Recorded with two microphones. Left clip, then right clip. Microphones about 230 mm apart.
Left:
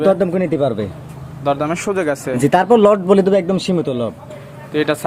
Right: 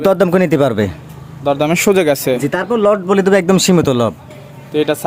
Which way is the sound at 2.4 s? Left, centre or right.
Centre.